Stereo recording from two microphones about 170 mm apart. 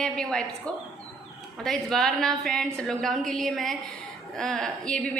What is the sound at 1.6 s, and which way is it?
A woman's voice, 5° left (ahead or behind).